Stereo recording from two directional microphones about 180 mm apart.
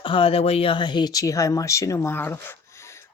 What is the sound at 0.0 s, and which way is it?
Speech, 30° left (ahead or behind).